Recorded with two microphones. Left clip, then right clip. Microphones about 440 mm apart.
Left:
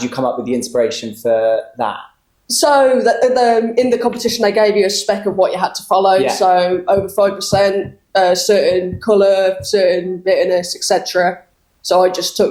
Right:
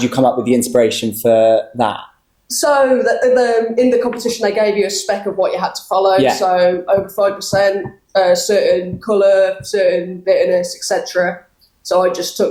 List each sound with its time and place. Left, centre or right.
0.0 s speech: right
2.5 s a woman's voice: left